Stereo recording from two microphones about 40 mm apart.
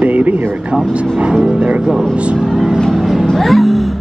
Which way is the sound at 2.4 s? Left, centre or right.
Centre.